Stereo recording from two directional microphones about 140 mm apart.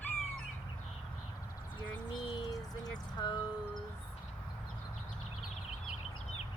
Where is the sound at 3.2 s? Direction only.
30° left (ahead or behind).